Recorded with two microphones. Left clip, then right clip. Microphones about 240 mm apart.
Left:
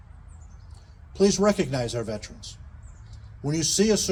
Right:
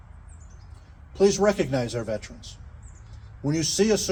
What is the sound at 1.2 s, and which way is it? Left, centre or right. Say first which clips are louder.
A man's voice: right 1 dB; left.